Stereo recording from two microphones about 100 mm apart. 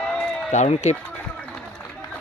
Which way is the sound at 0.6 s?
90° left.